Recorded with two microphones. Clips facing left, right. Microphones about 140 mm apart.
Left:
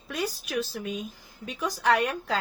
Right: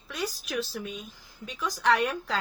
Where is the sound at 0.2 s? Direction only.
45° left (ahead or behind).